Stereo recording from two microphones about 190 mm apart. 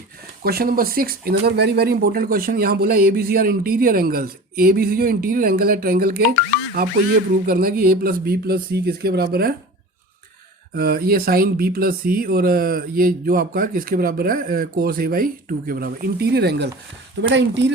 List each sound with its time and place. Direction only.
0.4 s speech: 50° right (ahead or behind)
6.8 s music: 55° right (ahead or behind)
7.4 s speech: 50° right (ahead or behind)
10.8 s speech: 55° right (ahead or behind)